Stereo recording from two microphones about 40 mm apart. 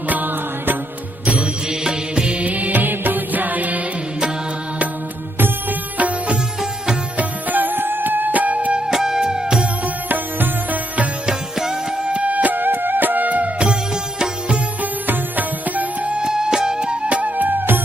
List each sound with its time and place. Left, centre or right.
0.1 s mantra: right
1.2 s mantra: right
1.8 s music: centre; by 3.8 s right
6.0 s music: right
7.2 s music: right
8.9 s music: centre
9.8 s music: right
11.3 s music: centre
12.1 s music: right
13.6 s music: right
14.8 s music: right
16.1 s music: centre
17.2 s music: right